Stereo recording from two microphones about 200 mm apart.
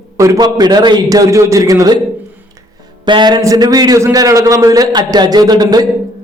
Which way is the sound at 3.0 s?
20° right (ahead or behind).